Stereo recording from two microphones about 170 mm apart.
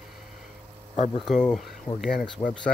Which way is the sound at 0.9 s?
40° left (ahead or behind).